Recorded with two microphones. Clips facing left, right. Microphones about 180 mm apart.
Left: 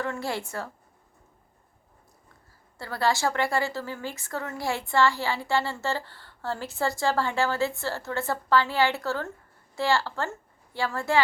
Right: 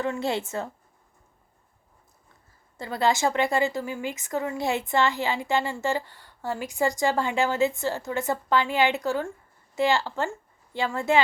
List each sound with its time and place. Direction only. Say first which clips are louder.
0.0 s a woman's voice: right 4 dB; 20° right (ahead or behind)
2.7 s a woman's voice: right 2 dB; 20° right (ahead or behind)